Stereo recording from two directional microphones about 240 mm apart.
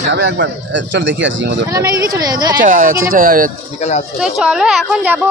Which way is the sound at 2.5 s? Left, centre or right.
Right.